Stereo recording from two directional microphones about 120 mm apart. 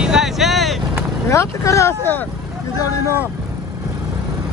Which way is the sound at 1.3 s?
25° left (ahead or behind).